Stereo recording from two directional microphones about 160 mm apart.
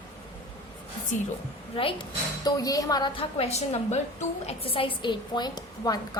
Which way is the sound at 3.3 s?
40° left (ahead or behind).